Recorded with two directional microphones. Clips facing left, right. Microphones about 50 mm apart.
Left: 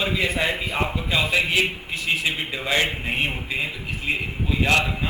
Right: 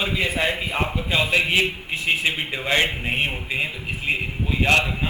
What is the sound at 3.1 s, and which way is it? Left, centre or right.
Speech, centre.